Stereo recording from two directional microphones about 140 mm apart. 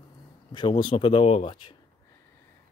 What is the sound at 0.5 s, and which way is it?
Speech, 35° left (ahead or behind).